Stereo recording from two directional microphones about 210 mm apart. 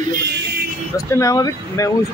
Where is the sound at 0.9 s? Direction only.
15° left (ahead or behind).